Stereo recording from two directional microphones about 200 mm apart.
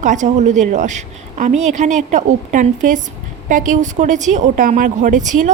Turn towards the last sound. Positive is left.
turn(degrees=-40)  # may be behind; listen again after turning